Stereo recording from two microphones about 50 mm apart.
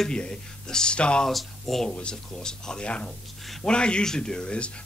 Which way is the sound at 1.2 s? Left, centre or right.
Centre.